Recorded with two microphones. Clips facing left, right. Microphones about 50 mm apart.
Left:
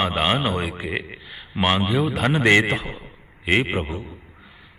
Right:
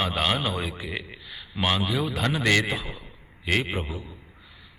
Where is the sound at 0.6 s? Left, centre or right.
Left.